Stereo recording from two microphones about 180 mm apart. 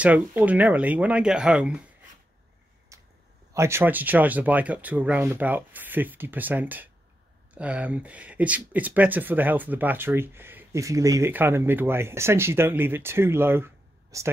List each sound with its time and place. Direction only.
0.0 s speech: 10° right (ahead or behind)
2.9 s a sound: 15° right (ahead or behind)
3.5 s a woman's voice: 15° right (ahead or behind)